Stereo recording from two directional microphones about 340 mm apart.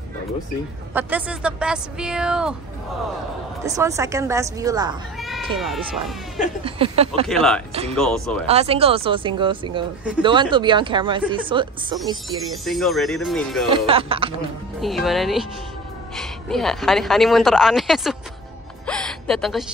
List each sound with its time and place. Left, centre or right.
0.9 s a woman's voice: centre
3.6 s speech: centre
5.6 s a woman's voice: centre
6.6 s speech: centre
7.2 s a woman's voice: centre
8.5 s speech: centre
12.6 s a woman's voice: centre
13.7 s speech: centre
14.8 s a woman's voice: centre
18.9 s gasp: centre